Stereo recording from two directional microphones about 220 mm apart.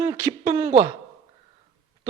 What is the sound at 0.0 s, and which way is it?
Speech, 10° right (ahead or behind).